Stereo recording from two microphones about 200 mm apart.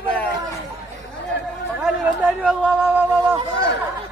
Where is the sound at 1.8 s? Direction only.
5° right (ahead or behind).